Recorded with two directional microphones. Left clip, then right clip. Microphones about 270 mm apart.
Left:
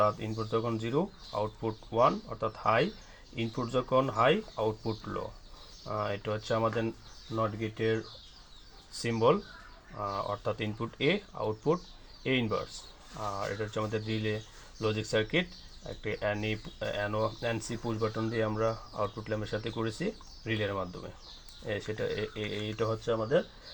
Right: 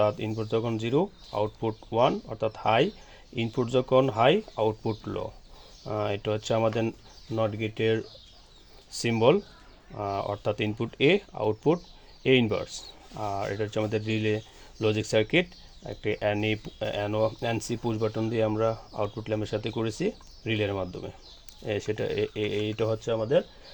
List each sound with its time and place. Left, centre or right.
0.0 s speech: right